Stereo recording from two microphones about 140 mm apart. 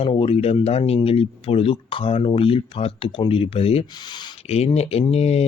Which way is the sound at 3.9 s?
30° left (ahead or behind).